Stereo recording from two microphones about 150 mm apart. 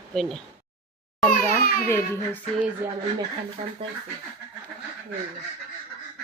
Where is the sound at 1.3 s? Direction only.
75° left (ahead or behind).